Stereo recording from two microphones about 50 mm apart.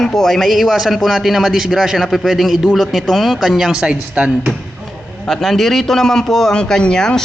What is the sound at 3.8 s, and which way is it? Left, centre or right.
Speech, right.